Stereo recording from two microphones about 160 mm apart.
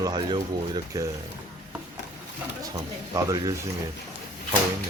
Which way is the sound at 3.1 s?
20° right (ahead or behind).